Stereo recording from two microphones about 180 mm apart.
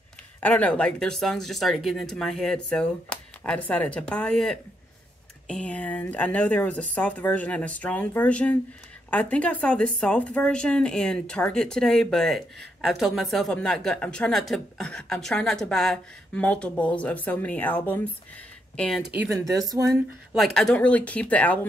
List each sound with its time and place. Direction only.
0.4 s a woman's voice: 10° left (ahead or behind)
19.3 s a woman's voice: 20° right (ahead or behind)
20.5 s a woman's voice: 5° left (ahead or behind)